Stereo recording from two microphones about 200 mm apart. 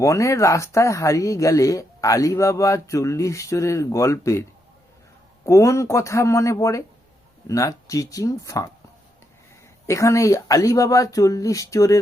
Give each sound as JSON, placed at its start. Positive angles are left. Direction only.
{"t": 0.0, "sound": "speech", "side_deg": 15}
{"t": 5.5, "sound": "speech", "side_deg": 15}
{"t": 9.8, "sound": "speech", "side_deg": 15}